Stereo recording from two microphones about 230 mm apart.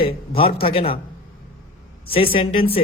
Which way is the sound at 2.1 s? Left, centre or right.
Left.